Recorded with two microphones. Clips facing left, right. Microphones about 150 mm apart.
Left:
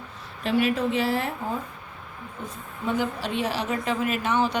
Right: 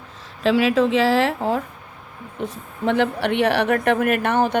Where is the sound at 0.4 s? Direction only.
90° right.